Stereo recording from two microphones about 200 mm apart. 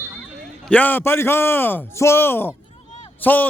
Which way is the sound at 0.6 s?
5° left (ahead or behind).